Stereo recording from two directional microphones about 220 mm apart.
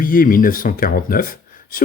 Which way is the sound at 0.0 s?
40° left (ahead or behind).